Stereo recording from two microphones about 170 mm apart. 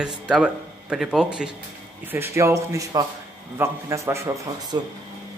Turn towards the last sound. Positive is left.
turn(degrees=-20)  # may be behind; listen again after turning